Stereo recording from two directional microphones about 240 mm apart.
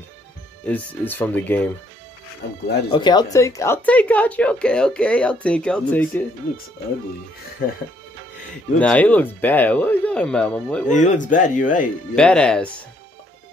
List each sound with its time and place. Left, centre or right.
0.7 s speech: centre
2.9 s a woman's voice: centre
8.7 s a woman's voice: centre
10.9 s speech: left
12.2 s a woman's voice: centre